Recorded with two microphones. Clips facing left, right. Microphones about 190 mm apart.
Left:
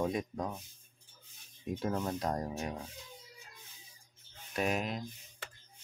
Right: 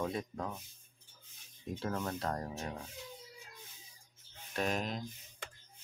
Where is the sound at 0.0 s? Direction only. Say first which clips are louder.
Left 3 dB; 15° left (ahead or behind).